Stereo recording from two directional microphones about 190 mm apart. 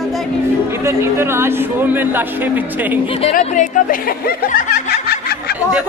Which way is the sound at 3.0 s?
30° left (ahead or behind).